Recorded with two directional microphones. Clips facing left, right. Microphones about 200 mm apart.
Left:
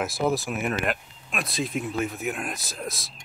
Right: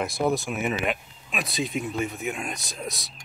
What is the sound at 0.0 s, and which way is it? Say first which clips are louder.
Speech: even; centre (ahead or behind).